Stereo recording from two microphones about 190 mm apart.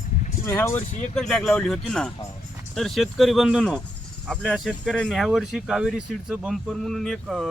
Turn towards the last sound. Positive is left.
turn(degrees=0)  # may be behind; listen again after turning